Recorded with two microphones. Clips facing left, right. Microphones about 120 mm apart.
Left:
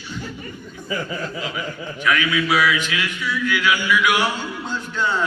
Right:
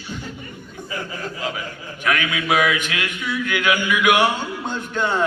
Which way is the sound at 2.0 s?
50° right (ahead or behind).